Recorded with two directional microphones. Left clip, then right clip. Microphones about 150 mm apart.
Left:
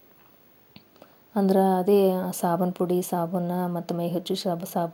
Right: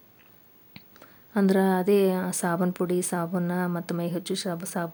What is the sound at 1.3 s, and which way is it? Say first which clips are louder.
A woman's voice: left 2 dB; 10° right (ahead or behind).